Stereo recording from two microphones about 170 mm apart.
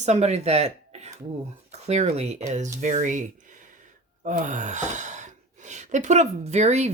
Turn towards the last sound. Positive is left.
turn(degrees=-40)  # may be behind; listen again after turning